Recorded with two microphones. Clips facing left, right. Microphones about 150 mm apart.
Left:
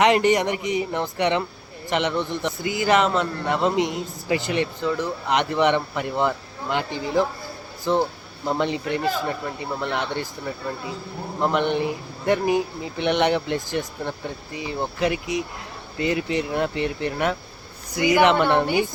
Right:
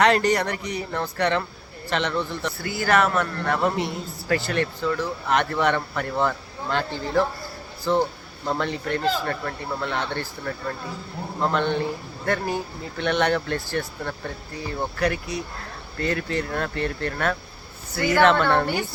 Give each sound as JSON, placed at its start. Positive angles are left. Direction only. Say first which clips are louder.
{"t": 0.0, "sound": "a man's voice", "louder": "left 2 dB", "side_deg": 20}